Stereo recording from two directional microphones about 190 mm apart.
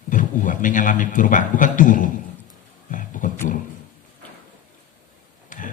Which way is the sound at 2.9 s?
45° left (ahead or behind).